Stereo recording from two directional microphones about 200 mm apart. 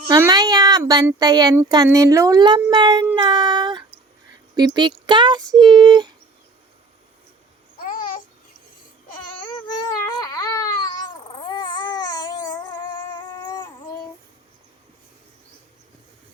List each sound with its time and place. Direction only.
0.2 s speech: 20° right (ahead or behind)
7.8 s babbling: 45° left (ahead or behind)
9.6 s baby cry: 20° left (ahead or behind)